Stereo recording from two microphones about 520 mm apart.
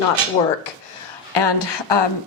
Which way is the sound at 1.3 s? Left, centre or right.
Left.